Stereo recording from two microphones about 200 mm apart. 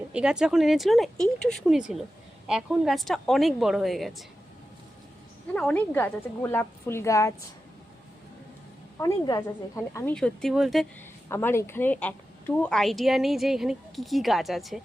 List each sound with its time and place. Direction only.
0.1 s a woman's voice: 5° right (ahead or behind)
5.5 s a woman's voice: 5° left (ahead or behind)
9.0 s a woman's voice: 20° left (ahead or behind)
10.2 s a woman's voice: 5° left (ahead or behind)
11.3 s a woman's voice: 10° left (ahead or behind)